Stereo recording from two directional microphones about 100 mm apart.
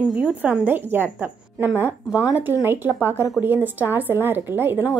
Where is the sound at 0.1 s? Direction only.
10° right (ahead or behind).